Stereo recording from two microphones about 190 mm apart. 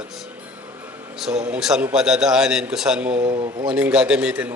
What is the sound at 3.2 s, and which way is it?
Speech, 25° right (ahead or behind).